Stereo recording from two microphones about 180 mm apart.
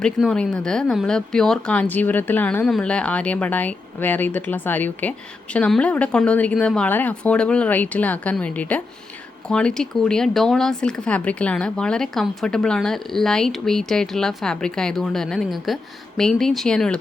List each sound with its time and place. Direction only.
0.0 s speech: 5° left (ahead or behind)